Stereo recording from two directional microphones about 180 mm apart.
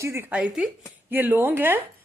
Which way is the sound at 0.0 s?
15° right (ahead or behind).